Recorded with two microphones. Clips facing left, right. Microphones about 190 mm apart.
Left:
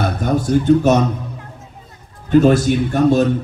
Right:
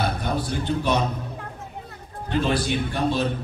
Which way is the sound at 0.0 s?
45° left (ahead or behind).